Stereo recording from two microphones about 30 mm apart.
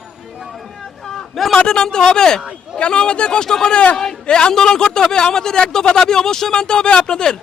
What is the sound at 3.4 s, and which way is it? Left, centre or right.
Speech, centre.